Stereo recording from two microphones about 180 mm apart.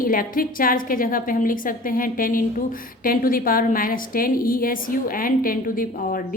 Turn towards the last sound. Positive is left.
turn(degrees=50)  # may be behind; listen again after turning